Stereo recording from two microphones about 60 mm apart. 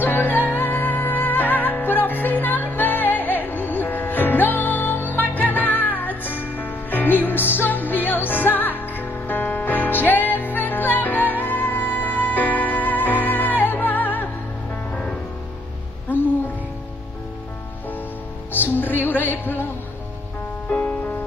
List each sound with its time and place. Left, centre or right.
0.0 s music: left
16.1 s music: right
18.5 s music: left
20.7 s music: left